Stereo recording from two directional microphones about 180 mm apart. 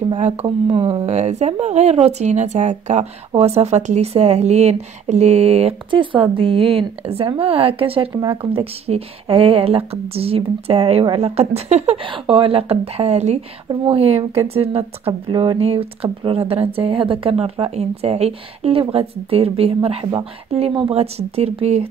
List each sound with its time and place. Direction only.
0.2 s speech: 35° right (ahead or behind)